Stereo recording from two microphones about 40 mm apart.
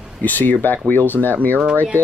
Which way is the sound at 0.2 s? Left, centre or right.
Left.